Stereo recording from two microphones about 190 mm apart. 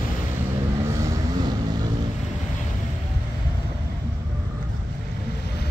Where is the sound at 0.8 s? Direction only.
15° right (ahead or behind).